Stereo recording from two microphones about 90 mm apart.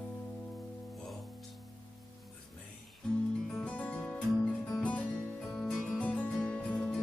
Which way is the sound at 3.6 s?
15° left (ahead or behind).